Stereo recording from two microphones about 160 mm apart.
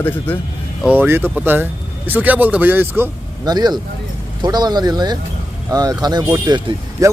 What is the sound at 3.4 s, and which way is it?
Speech, 25° right (ahead or behind).